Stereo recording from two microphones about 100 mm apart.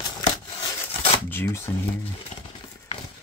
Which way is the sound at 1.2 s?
25° left (ahead or behind).